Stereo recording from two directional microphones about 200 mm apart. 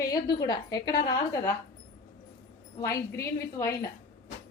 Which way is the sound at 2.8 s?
15° left (ahead or behind).